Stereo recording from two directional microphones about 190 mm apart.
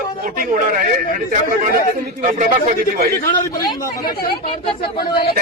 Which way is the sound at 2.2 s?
45° right (ahead or behind).